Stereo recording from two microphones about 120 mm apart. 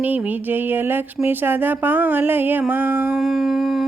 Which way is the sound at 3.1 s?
5° right (ahead or behind).